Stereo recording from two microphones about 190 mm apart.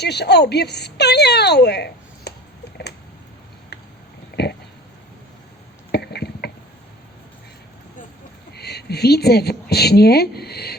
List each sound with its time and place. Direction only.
0.0 s speech: 60° left (ahead or behind)
4.4 s pig: 60° left (ahead or behind)
5.9 s a sound: 60° left (ahead or behind)
8.5 s a woman's voice: 60° left (ahead or behind)